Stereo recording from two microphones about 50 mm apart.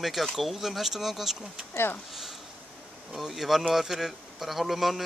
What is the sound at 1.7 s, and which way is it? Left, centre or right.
Speech, left.